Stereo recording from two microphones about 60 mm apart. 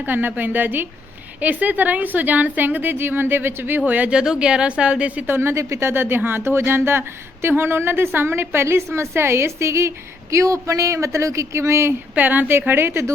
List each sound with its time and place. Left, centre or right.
0.0 s a woman's voice: right
3.8 s a woman's voice: right
4.1 s speech: centre
5.3 s speech: right
5.9 s speech: right
12.1 s a woman's voice: right
12.5 s speech: right